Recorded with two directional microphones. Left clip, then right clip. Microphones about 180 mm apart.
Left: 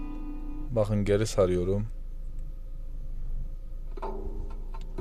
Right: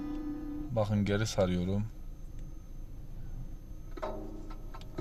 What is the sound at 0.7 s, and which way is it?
Speech, 25° left (ahead or behind).